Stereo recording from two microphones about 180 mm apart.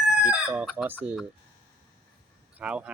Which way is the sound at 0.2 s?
5° right (ahead or behind).